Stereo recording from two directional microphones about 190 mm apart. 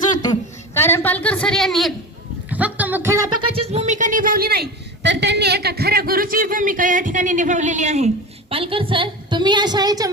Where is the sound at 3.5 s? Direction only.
30° right (ahead or behind).